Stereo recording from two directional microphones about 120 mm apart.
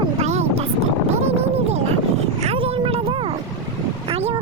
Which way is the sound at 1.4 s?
60° right (ahead or behind).